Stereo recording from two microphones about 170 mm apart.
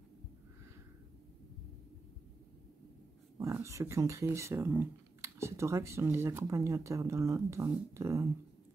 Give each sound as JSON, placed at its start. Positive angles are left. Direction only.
{"t": 3.3, "sound": "speech", "side_deg": -15}